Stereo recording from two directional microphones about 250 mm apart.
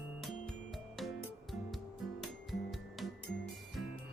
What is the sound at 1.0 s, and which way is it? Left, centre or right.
Music, centre.